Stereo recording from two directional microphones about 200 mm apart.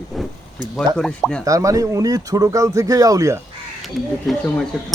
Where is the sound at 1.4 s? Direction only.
15° right (ahead or behind).